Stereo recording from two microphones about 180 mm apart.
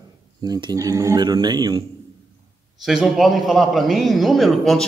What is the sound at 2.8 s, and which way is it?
A man's voice, centre (ahead or behind).